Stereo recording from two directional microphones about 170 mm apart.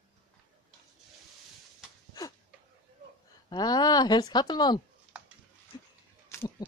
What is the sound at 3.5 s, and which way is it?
A woman's voice, 25° left (ahead or behind).